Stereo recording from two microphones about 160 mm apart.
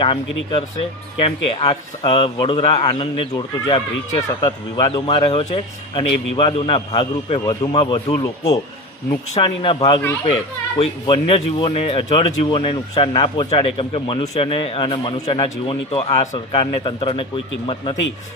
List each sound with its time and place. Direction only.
0.0 s a man's voice: 35° left (ahead or behind)
5.2 s a man's voice: 40° left (ahead or behind); by 8.5 s 20° left (ahead or behind)
9.4 s a man's voice: 35° left (ahead or behind)